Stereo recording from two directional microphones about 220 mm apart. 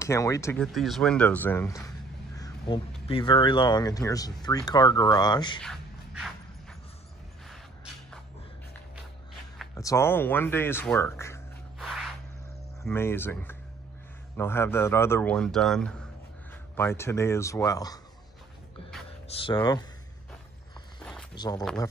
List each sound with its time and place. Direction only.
0.0 s a man's voice: 15° left (ahead or behind)
0.7 s a man's voice: centre (ahead or behind)
2.3 s crow: 15° left (ahead or behind)
3.1 s speech: 20° left (ahead or behind)
5.6 s a sound: centre (ahead or behind)
7.4 s a sound: centre (ahead or behind)
9.8 s a man's voice: 15° left (ahead or behind)
11.8 s a sound: centre (ahead or behind)
12.8 s a man's voice: 10° left (ahead or behind)
19.3 s speech: 20° left (ahead or behind)
21.0 s walk: 5° left (ahead or behind)
21.4 s a man's voice: 15° left (ahead or behind)